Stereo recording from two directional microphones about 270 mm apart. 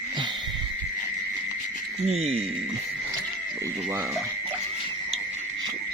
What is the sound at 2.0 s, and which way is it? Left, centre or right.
Speech, right.